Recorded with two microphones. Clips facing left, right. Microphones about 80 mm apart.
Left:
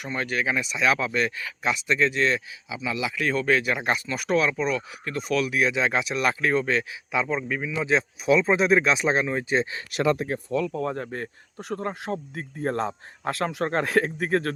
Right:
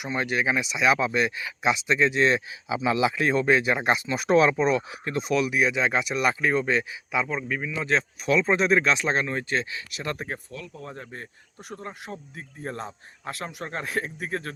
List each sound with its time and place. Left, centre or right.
0.0 s speech: centre
5.5 s speech: centre
9.9 s speech: left
10.7 s speech: left
10.9 s speech: left